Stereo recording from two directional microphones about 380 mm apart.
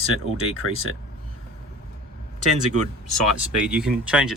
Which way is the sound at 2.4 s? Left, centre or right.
Right.